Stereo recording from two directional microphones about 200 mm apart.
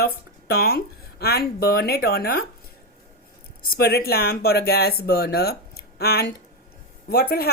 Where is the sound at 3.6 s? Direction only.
50° left (ahead or behind).